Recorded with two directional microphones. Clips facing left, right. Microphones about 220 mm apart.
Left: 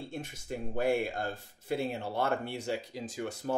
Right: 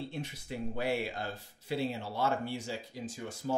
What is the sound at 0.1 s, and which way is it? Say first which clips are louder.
Speech: left 1 dB; 45° left (ahead or behind).